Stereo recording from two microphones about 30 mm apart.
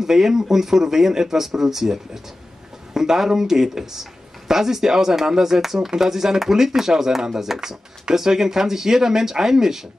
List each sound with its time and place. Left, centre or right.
0.0 s speech: centre